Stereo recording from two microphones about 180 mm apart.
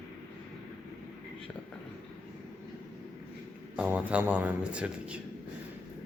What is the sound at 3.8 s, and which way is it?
Speech, 10° right (ahead or behind).